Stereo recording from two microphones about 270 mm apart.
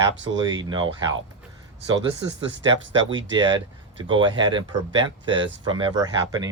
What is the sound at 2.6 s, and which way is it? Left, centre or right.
Speech, centre.